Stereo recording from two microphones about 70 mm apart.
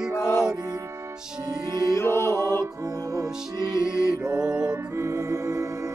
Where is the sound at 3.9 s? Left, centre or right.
Right.